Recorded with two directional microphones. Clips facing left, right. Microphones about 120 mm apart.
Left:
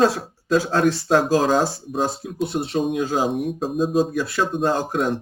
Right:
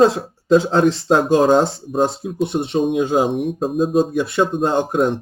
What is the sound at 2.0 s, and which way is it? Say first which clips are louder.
Speech: right 5 dB; 20° right (ahead or behind).